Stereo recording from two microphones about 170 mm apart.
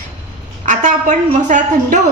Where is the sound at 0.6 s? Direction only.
45° right (ahead or behind).